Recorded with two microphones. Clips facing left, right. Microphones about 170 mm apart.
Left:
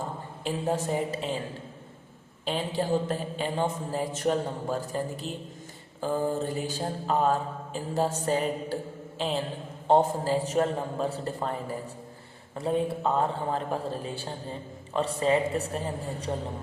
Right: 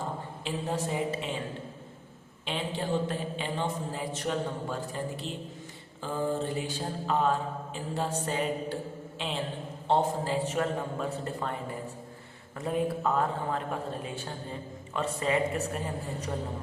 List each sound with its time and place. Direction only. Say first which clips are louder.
0.4 s a woman's voice: left 4 dB; 45° left (ahead or behind)
2.4 s mantra: left 4 dB; 40° left (ahead or behind)
12.5 s mantra: left 2 dB; 30° left (ahead or behind)